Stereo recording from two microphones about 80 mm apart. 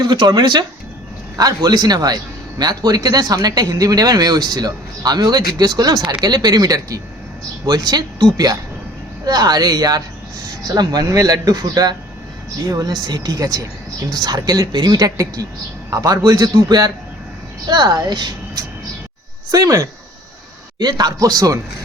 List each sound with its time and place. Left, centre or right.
0.0 s speech: right
19.5 s speech: right
20.7 s speech: right